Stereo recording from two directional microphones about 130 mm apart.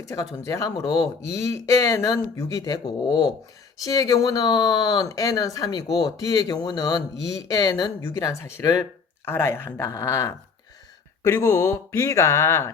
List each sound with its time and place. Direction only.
0.0 s speech: 25° left (ahead or behind)